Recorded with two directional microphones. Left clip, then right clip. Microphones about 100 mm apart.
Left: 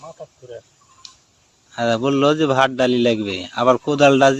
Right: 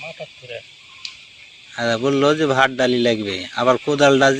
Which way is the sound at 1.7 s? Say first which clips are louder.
Even; 90° left.